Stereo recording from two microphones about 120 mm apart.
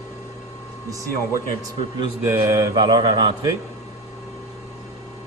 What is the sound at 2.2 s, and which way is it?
Mantra, 25° right (ahead or behind).